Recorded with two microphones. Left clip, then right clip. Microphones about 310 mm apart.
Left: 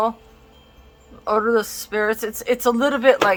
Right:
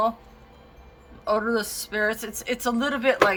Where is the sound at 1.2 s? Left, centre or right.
Centre.